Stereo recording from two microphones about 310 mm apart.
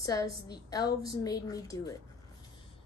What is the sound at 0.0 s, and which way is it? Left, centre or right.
A woman's voice, centre.